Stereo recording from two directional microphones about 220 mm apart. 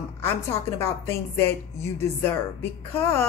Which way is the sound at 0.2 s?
10° left (ahead or behind).